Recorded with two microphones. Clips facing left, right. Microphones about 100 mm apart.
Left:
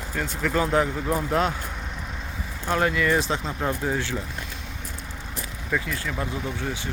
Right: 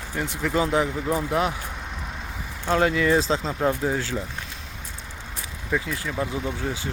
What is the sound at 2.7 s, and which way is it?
Speech, 25° right (ahead or behind).